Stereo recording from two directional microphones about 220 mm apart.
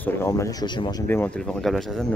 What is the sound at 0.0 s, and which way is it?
Speech, 10° left (ahead or behind).